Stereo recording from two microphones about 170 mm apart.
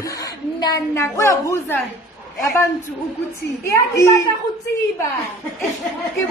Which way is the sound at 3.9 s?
20° left (ahead or behind).